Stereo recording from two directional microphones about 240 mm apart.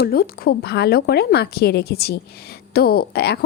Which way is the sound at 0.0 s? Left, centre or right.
Left.